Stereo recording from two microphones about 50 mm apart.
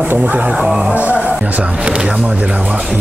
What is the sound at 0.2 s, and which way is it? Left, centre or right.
Speech, right.